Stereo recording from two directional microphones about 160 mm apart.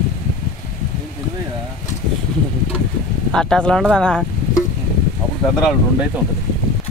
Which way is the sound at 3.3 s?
5° left (ahead or behind).